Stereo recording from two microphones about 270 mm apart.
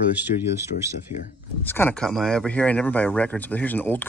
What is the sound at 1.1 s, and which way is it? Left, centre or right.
Speech, left.